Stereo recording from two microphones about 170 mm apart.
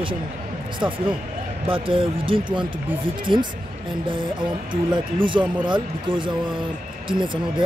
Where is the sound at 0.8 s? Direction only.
30° right (ahead or behind).